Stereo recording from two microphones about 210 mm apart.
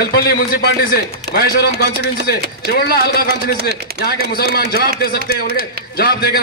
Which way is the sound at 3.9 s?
45° right (ahead or behind).